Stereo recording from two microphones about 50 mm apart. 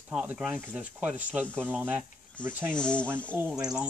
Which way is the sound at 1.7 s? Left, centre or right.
Right.